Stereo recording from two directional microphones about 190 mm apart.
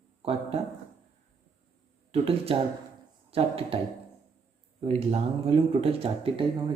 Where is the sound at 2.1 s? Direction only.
30° right (ahead or behind).